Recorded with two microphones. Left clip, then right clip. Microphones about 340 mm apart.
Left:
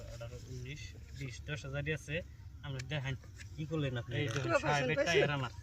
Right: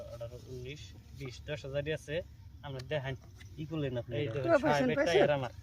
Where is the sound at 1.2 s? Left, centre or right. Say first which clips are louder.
Right 4 dB; centre.